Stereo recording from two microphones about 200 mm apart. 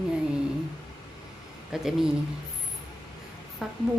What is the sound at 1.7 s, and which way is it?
Speech, centre (ahead or behind).